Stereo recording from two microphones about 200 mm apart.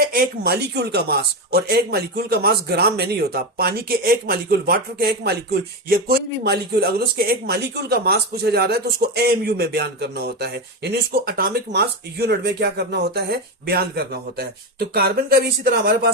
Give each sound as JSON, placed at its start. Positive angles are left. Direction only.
{"t": 0.1, "sound": "a man's voice", "side_deg": -50}